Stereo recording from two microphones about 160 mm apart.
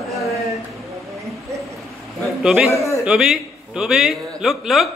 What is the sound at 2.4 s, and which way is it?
A man's voice, 5° right (ahead or behind).